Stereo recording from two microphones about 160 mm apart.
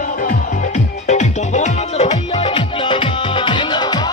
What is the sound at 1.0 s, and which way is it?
Music, 45° left (ahead or behind).